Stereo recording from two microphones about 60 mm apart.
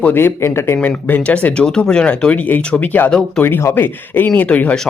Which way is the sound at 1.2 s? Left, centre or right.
Left.